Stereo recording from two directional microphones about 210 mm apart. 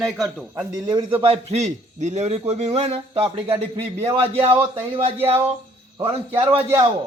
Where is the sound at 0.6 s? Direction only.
20° right (ahead or behind).